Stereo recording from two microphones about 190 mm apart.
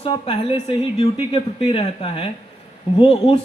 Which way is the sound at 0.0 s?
30° left (ahead or behind).